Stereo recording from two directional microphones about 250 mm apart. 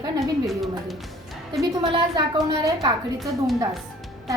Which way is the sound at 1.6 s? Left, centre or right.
Centre.